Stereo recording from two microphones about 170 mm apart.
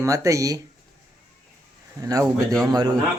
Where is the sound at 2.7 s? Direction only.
25° right (ahead or behind).